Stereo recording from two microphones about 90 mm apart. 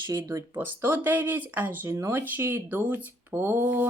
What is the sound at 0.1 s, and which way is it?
Speech, 35° right (ahead or behind).